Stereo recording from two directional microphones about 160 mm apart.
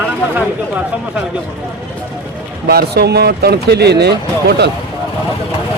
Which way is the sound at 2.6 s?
80° right.